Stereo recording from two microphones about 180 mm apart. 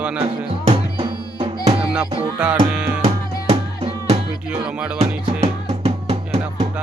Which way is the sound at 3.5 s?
35° right (ahead or behind).